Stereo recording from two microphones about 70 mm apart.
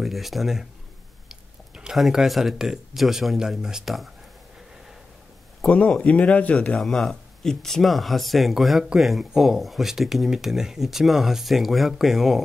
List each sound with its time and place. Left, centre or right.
0.0 s speech: centre
5.7 s speech: centre
6.8 s speech: centre